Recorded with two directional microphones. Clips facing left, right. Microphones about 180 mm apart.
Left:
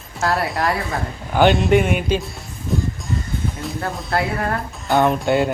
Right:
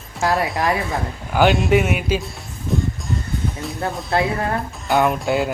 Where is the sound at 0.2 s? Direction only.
20° right (ahead or behind).